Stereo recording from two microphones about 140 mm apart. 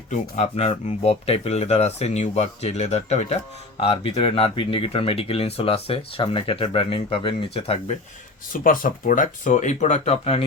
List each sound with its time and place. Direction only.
0.1 s speech: 55° left (ahead or behind)
3.8 s speech: 40° left (ahead or behind)
8.6 s speech: 75° left (ahead or behind); by 10.4 s 45° left (ahead or behind)